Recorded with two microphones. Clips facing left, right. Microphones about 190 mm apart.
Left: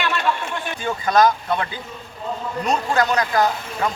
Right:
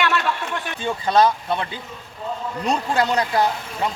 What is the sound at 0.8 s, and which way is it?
Speech, 30° right (ahead or behind).